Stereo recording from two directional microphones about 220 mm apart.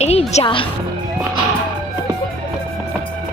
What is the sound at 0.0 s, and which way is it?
Speech, 30° left (ahead or behind).